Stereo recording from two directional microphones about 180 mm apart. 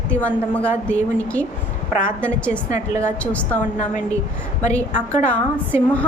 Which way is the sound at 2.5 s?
15° right (ahead or behind).